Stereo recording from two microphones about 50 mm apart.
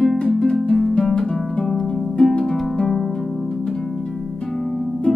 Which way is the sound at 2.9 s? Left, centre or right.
Centre.